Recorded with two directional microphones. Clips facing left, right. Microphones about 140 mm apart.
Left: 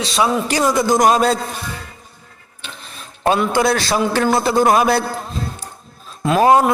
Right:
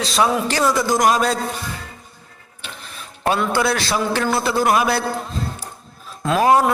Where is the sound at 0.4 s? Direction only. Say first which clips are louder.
Left 2 dB; 15° left (ahead or behind).